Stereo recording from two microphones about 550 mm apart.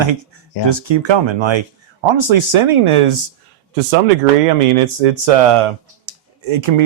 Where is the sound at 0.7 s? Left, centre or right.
Right.